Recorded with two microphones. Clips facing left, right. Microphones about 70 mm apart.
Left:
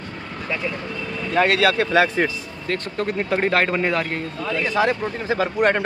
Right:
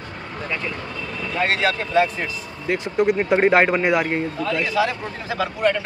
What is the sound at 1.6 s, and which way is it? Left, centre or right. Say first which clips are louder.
Speech: left 2 dB; left.